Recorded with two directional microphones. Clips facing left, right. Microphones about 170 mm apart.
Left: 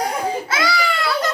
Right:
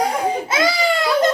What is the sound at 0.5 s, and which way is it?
Speech, 20° right (ahead or behind).